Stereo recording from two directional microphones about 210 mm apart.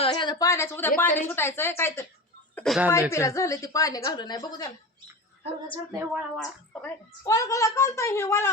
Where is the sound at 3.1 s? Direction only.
15° left (ahead or behind).